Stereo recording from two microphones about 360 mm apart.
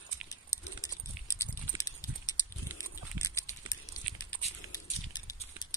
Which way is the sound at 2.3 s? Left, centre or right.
Centre.